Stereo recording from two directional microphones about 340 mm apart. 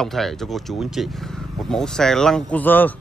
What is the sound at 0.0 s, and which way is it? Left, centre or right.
Speech, centre.